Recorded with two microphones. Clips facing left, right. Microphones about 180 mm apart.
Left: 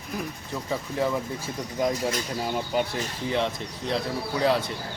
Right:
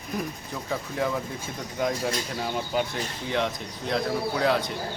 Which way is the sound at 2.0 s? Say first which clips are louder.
Left 1 dB; centre (ahead or behind).